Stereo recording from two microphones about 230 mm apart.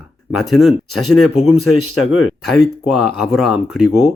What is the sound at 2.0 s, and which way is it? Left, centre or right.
Speech, left.